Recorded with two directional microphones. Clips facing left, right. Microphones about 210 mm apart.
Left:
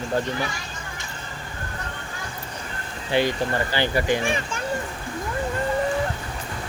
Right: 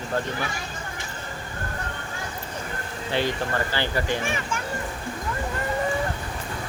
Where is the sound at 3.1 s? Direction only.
15° left (ahead or behind).